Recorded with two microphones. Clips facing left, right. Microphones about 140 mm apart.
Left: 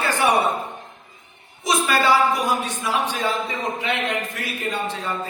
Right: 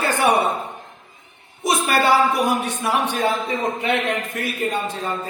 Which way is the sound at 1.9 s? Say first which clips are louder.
Right 1 dB; 55° right (ahead or behind).